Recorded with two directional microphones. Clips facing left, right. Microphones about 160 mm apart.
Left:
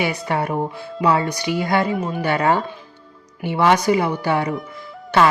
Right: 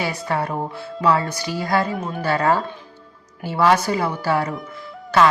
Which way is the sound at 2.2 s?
20° left (ahead or behind).